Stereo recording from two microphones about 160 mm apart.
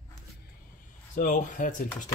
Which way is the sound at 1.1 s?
55° left (ahead or behind).